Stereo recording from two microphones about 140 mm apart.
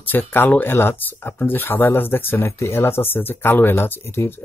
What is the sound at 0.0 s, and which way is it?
Speech, 15° left (ahead or behind).